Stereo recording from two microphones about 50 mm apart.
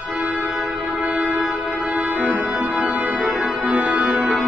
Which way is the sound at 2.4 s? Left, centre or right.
Right.